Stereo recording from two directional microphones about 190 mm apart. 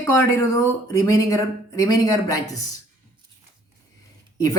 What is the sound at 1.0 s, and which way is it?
Speech, 20° left (ahead or behind).